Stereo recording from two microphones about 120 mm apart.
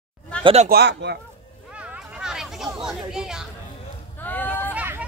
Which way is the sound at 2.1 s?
5° right (ahead or behind).